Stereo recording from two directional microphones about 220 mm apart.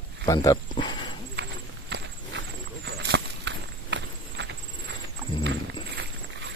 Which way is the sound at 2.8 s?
50° right (ahead or behind).